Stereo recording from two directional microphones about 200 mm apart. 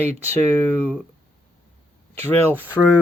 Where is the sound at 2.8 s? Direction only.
5° left (ahead or behind).